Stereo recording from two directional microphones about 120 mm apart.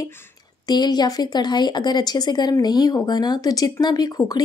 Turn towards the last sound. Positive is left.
turn(degrees=30)  # may be behind; listen again after turning